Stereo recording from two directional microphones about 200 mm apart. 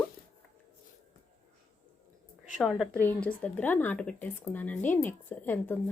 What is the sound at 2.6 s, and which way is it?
Speech, centre (ahead or behind).